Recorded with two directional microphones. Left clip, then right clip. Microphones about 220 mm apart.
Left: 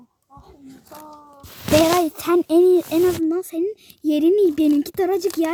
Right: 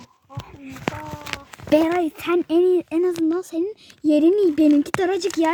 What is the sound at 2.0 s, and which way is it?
Speech, 20° left (ahead or behind).